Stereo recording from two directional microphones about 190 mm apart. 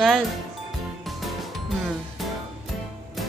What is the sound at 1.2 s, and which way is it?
Music, centre (ahead or behind).